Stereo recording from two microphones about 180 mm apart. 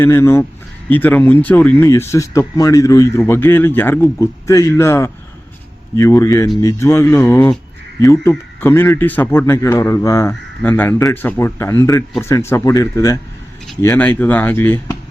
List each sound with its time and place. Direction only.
0.0 s speech: 15° left (ahead or behind)